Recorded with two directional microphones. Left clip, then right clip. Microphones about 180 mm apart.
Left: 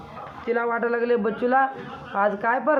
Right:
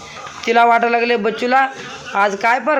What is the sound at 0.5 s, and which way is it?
Speech, 35° right (ahead or behind).